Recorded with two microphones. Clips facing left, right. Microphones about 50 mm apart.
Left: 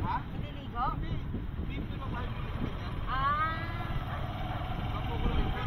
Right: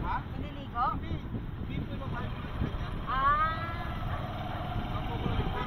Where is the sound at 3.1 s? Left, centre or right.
Right.